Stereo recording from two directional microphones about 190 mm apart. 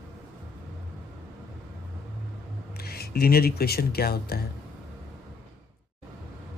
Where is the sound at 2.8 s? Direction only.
55° left (ahead or behind).